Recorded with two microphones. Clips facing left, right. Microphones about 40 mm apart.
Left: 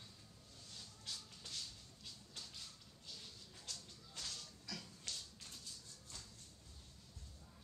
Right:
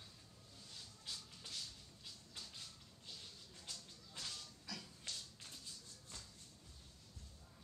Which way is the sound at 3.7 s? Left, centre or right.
Centre.